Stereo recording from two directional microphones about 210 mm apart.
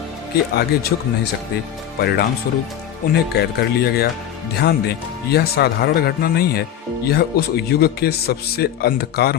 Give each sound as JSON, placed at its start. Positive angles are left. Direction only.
{"t": 0.5, "sound": "speech", "side_deg": 50}